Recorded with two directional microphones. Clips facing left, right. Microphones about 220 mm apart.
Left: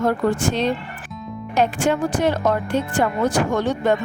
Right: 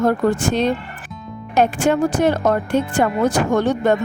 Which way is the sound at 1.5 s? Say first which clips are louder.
Right 3 dB; 50° right (ahead or behind).